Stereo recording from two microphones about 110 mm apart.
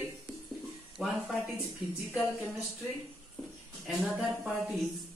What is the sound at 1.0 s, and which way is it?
Speech, 10° right (ahead or behind).